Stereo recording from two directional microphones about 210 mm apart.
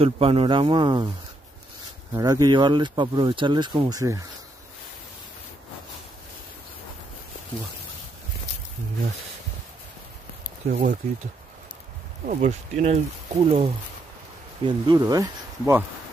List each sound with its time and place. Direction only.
0.0 s speech: 25° right (ahead or behind)
2.1 s speech: 15° right (ahead or behind)
10.7 s speech: 40° right (ahead or behind)
12.3 s speech: 35° right (ahead or behind); by 15.8 s 15° right (ahead or behind)